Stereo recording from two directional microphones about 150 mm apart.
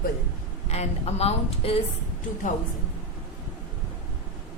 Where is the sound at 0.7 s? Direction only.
45° left (ahead or behind).